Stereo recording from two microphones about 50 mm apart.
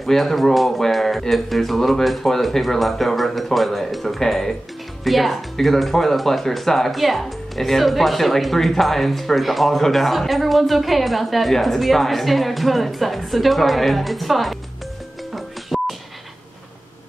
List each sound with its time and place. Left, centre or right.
0.0 s speech: centre
15.3 s music: centre